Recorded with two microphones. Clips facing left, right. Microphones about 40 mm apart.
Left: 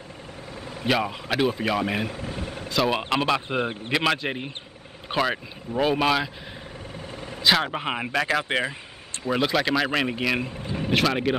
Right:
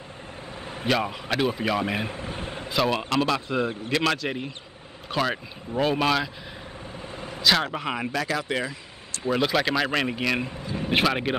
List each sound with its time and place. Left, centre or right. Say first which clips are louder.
0.8 s a man's voice: left 1 dB; centre
2.0 s vehicle: left 1 dB; right
3.0 s speech: left 1 dB; left
3.9 s speech: left 2 dB; centre
7.2 s vehicle: right 1 dB; right
7.6 s speech: left 1 dB; left
9.3 s a man's voice: even; centre
11.1 s a man's voice: left 1 dB; centre